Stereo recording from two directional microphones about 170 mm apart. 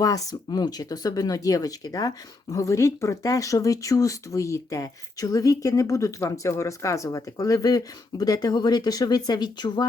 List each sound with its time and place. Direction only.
0.0 s speech: 20° left (ahead or behind)